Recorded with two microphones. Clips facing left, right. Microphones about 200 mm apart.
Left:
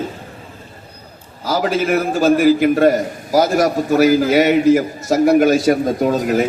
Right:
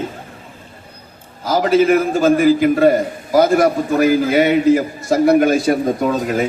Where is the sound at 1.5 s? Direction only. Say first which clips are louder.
Right 4 dB; 50° right (ahead or behind).